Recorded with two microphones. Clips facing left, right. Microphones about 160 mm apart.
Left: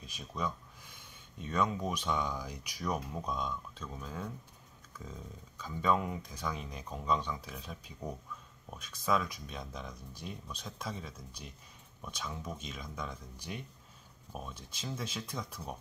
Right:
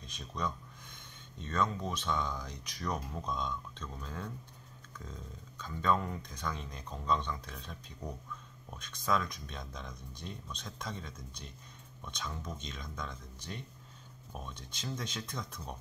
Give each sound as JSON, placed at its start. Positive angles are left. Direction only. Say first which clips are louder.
{"t": 0.0, "sound": "speech", "louder": "even", "side_deg": 5}